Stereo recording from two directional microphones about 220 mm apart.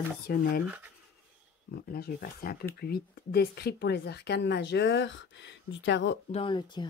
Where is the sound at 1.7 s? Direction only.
45° left (ahead or behind).